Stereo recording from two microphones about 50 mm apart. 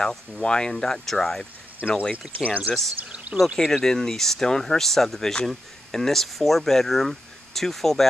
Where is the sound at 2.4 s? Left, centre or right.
Right.